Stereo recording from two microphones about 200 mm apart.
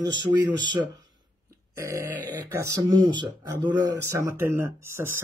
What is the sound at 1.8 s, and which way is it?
Speech, 15° right (ahead or behind).